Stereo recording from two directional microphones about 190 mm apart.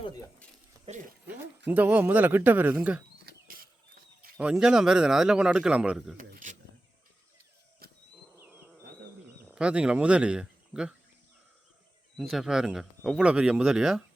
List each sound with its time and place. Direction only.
1.3 s speech: 10° right (ahead or behind)
3.2 s a sound: 50° right (ahead or behind)
4.4 s speech: 5° right (ahead or behind)
6.1 s a sound: 45° right (ahead or behind)
7.8 s wild animals: 55° right (ahead or behind)
8.4 s bee: 10° right (ahead or behind)
9.5 s speech: 5° right (ahead or behind)
12.1 s speech: centre (ahead or behind)